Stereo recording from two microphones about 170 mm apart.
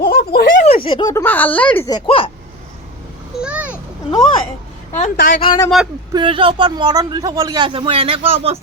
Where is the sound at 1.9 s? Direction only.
30° left (ahead or behind).